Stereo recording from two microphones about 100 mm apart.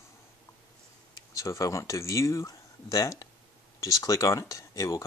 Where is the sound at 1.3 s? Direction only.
35° left (ahead or behind).